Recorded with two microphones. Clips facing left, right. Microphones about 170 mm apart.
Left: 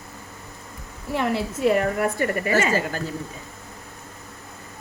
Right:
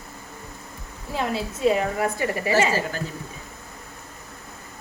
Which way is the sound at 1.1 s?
65° left (ahead or behind).